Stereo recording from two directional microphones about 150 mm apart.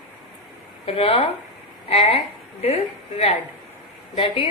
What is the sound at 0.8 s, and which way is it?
A woman's voice, 40° left (ahead or behind).